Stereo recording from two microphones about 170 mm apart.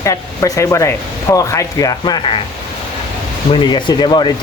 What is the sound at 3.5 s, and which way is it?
Speech, 30° left (ahead or behind).